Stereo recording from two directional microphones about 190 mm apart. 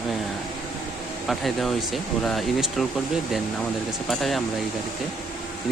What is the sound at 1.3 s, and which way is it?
Speech, centre (ahead or behind).